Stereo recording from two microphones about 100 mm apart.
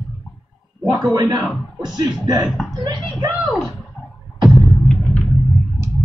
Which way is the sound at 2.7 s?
40° right (ahead or behind).